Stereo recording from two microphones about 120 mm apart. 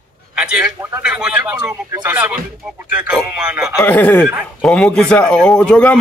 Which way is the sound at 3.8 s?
15° left (ahead or behind).